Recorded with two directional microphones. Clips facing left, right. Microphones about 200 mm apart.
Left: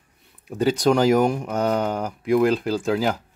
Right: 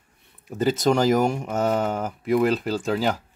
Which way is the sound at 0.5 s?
Centre (ahead or behind).